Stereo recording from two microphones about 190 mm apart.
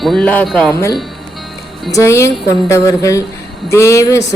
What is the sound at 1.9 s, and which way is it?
Speech, 15° left (ahead or behind).